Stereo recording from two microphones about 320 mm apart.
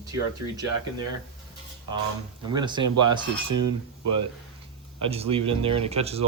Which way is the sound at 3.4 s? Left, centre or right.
Right.